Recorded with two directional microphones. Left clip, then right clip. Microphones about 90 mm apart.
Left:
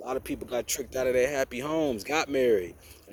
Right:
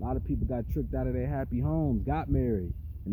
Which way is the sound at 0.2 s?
5° right (ahead or behind).